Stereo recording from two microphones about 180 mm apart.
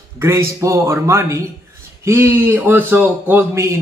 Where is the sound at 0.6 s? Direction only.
15° right (ahead or behind).